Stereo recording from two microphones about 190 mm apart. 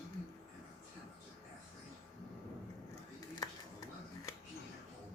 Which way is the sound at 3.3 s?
20° left (ahead or behind).